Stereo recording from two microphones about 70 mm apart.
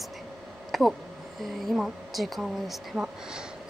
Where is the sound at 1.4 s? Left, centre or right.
Centre.